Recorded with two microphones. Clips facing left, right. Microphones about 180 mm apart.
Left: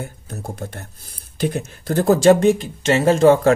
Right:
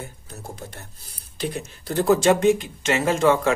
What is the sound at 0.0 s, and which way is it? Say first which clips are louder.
Speech: left 6 dB; 55° left (ahead or behind).